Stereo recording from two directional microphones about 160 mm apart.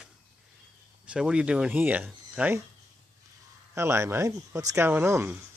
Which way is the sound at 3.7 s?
15° right (ahead or behind).